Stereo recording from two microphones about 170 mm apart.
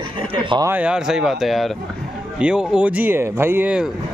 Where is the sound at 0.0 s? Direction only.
30° right (ahead or behind).